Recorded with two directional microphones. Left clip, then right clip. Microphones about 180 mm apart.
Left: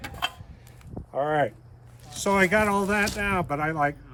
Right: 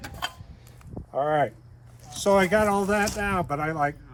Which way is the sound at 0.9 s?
30° right (ahead or behind).